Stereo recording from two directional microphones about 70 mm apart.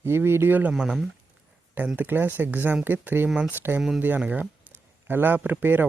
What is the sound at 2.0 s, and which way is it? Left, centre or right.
Speech, right.